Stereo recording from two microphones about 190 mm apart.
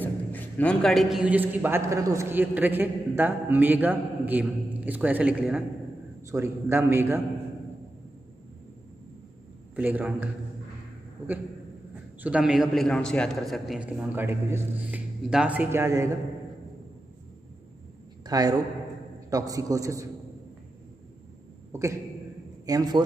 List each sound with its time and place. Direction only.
0.0 s a man's voice: 10° left (ahead or behind); by 7.2 s 10° right (ahead or behind)
9.8 s a man's voice: 10° right (ahead or behind)
12.2 s a man's voice: 5° right (ahead or behind)
18.2 s a sound: 20° right (ahead or behind)
19.3 s a man's voice: 20° right (ahead or behind)
22.7 s a man's voice: 20° right (ahead or behind)